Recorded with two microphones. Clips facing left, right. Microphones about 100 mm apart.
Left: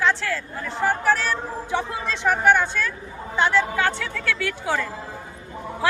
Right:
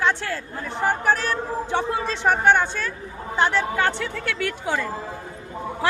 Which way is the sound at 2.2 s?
25° right (ahead or behind).